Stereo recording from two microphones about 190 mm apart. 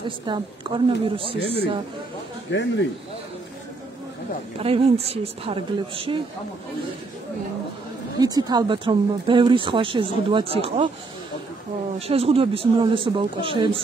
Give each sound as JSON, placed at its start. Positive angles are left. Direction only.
{"t": 0.2, "sound": "speech", "side_deg": -25}
{"t": 1.4, "sound": "speech", "side_deg": 60}
{"t": 2.5, "sound": "speech", "side_deg": 75}
{"t": 4.6, "sound": "a woman's voice", "side_deg": -30}
{"t": 8.2, "sound": "speech", "side_deg": -20}
{"t": 12.1, "sound": "speech", "side_deg": -30}